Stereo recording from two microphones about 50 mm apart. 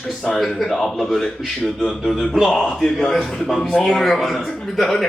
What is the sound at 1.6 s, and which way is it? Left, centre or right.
A man's voice, left.